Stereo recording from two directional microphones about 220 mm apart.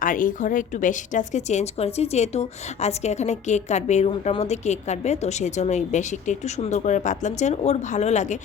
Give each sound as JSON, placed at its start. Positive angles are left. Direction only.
{"t": 0.0, "sound": "speech", "side_deg": 35}